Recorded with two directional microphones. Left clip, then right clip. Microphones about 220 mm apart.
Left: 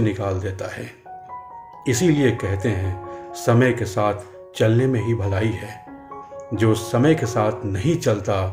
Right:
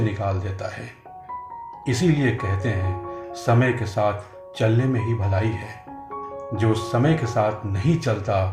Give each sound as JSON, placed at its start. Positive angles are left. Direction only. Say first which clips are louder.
{"t": 0.0, "sound": "speech", "louder": "left 3 dB", "side_deg": 50}